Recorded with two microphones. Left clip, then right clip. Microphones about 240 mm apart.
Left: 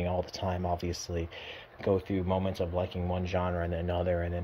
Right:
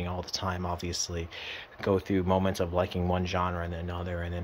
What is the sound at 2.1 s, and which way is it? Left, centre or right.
Speech, centre.